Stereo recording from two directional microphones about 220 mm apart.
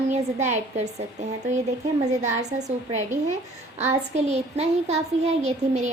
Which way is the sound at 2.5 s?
30° right (ahead or behind).